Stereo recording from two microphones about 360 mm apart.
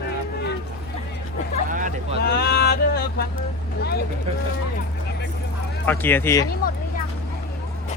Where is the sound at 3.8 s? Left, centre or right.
Left.